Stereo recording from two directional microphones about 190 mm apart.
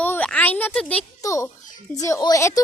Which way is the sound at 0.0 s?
5° left (ahead or behind).